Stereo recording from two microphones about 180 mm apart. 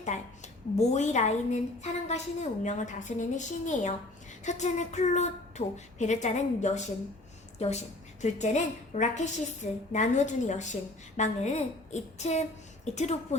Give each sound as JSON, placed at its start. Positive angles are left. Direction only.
{"t": 0.8, "sound": "a woman's voice", "side_deg": 40}